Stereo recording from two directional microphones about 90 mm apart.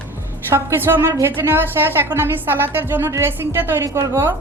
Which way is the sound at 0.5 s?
25° right (ahead or behind).